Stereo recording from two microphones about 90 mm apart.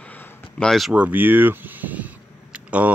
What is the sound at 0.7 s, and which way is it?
Speech, centre (ahead or behind).